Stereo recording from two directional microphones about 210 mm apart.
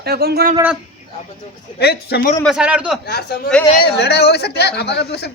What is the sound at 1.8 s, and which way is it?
Speech, 50° left (ahead or behind).